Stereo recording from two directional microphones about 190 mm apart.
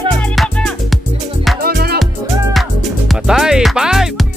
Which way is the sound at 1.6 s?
55° right (ahead or behind).